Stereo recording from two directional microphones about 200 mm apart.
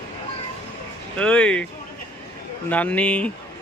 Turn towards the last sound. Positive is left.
turn(degrees=5)  # may be behind; listen again after turning